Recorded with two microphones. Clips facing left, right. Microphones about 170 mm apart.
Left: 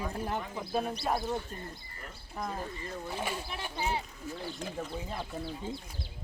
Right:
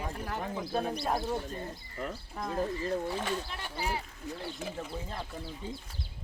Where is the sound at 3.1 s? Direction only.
10° left (ahead or behind).